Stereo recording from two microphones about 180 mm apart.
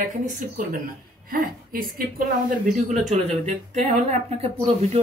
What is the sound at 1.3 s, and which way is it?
Speech, 55° right (ahead or behind).